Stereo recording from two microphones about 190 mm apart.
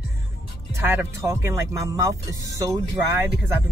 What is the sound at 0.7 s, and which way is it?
Speech, 15° right (ahead or behind).